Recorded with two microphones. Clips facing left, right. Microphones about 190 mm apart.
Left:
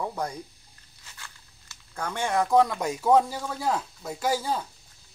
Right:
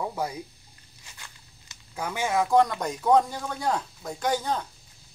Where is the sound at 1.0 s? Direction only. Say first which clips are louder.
Left 1 dB; 15° right (ahead or behind).